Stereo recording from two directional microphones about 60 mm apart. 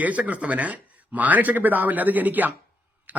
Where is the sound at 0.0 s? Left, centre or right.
Right.